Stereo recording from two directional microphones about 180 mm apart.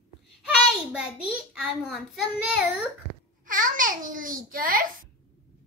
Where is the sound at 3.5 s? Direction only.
50° right (ahead or behind).